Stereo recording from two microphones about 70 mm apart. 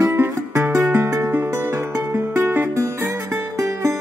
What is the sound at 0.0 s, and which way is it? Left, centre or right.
Music, right.